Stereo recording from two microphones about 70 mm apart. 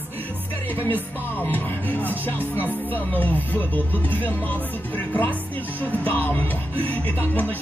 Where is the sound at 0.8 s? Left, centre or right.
Left.